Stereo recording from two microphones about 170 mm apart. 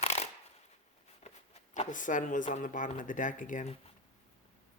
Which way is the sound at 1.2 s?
40° left (ahead or behind).